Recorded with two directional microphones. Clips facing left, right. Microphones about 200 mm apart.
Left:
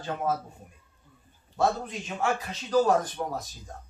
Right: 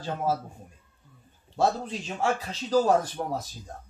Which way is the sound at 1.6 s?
30° right (ahead or behind).